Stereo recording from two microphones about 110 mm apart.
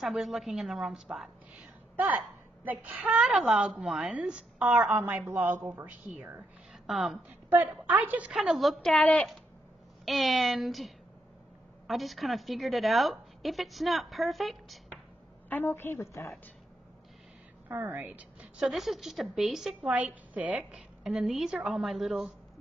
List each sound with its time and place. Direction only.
0.0 s a woman's voice: 5° right (ahead or behind)
6.7 s a sound: centre (ahead or behind)
7.2 s a woman's voice: 15° right (ahead or behind); by 9.3 s 10° left (ahead or behind)
10.0 s a woman's voice: centre (ahead or behind)
11.9 s a woman's voice: centre (ahead or behind)
15.5 s a woman's voice: 20° left (ahead or behind)
17.6 s a woman's voice: 20° right (ahead or behind)
18.7 s a woman's voice: centre (ahead or behind)